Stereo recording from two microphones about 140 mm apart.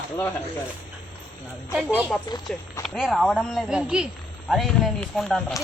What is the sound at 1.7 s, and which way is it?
Speech, 10° right (ahead or behind).